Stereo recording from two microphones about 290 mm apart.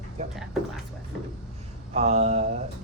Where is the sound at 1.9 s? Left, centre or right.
Right.